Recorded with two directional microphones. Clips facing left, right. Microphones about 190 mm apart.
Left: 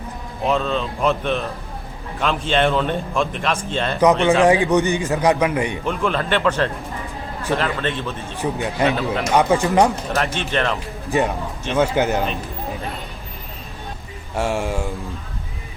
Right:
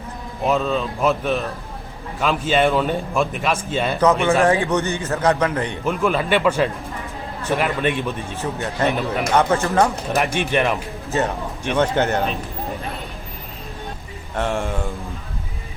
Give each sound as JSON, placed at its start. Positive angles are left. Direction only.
{"t": 0.4, "sound": "a man's voice", "side_deg": -5}
{"t": 4.0, "sound": "a man's voice", "side_deg": 15}
{"t": 5.8, "sound": "a man's voice", "side_deg": -5}
{"t": 8.4, "sound": "a man's voice", "side_deg": 15}
{"t": 10.2, "sound": "a man's voice", "side_deg": -15}
{"t": 11.1, "sound": "a man's voice", "side_deg": 15}
{"t": 14.3, "sound": "speech", "side_deg": 5}